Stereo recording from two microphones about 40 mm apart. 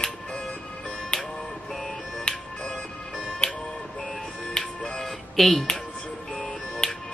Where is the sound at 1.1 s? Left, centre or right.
Centre.